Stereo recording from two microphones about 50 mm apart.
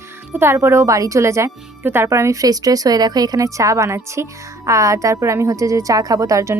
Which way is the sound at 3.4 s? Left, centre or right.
Right.